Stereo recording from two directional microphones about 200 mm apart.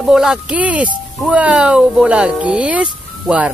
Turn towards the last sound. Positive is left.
turn(degrees=-5)  # may be behind; listen again after turning